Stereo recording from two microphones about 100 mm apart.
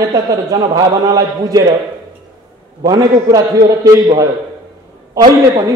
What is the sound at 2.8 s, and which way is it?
A man's voice, 40° right (ahead or behind).